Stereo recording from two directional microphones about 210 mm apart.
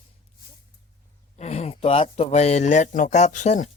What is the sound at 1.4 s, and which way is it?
A child's voice, 30° left (ahead or behind).